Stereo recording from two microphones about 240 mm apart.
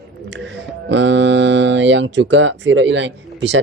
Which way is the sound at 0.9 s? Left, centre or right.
Right.